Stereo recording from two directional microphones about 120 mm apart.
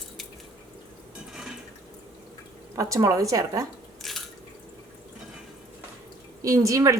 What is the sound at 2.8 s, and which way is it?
Speech, 25° right (ahead or behind).